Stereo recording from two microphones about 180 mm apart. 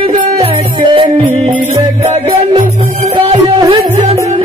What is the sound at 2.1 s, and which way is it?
Music, 30° right (ahead or behind).